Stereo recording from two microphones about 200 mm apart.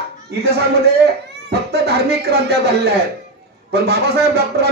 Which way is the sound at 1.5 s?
55° right (ahead or behind).